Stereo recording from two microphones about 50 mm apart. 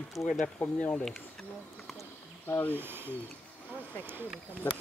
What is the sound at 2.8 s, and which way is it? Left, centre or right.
Speech, right.